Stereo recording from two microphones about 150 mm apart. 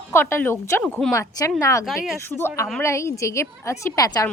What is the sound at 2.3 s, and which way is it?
A woman's voice, 15° left (ahead or behind).